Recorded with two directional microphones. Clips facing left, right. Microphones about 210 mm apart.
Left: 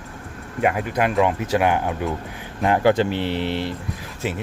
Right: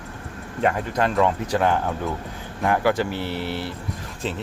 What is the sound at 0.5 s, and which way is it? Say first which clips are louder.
Speech: left 1 dB; 10° left (ahead or behind).